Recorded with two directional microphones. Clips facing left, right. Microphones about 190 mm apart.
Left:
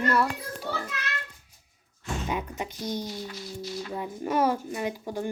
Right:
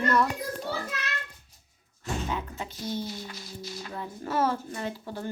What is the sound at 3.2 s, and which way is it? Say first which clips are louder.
Music: left 4 dB; 45° right (ahead or behind).